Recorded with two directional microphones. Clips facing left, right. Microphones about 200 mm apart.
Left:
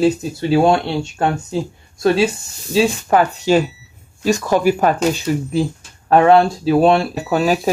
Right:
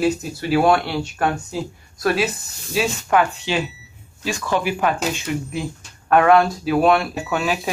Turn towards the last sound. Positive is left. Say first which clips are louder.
# left 6 dB
turn(degrees=35)  # may be behind; listen again after turning